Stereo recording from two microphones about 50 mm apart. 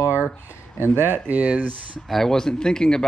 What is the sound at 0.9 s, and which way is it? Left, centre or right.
Speech, right.